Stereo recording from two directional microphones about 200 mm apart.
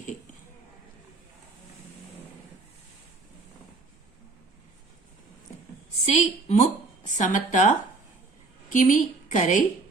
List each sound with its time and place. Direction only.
6.1 s speech: 35° left (ahead or behind)